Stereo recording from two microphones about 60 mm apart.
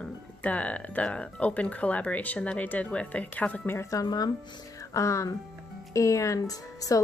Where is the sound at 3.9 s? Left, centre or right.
Left.